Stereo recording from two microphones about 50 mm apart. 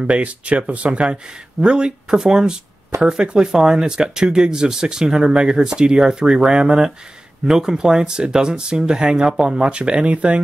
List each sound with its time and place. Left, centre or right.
0.0 s speech: right